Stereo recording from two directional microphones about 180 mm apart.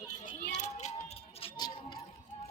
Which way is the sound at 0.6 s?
40° left (ahead or behind).